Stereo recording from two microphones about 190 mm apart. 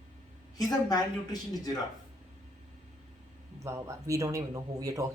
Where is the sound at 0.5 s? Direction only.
20° left (ahead or behind).